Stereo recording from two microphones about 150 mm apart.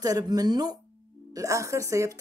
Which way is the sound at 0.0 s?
25° right (ahead or behind).